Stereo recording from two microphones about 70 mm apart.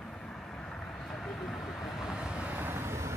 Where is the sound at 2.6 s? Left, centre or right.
Right.